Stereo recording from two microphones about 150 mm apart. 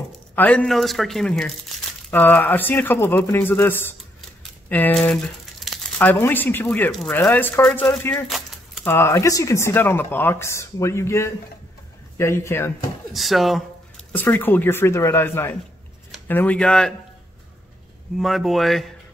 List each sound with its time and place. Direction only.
0.4 s speech: 10° left (ahead or behind)
8.0 s speech: 15° left (ahead or behind)
13.1 s speech: centre (ahead or behind)
14.1 s speech: 10° left (ahead or behind)
18.1 s speech: centre (ahead or behind)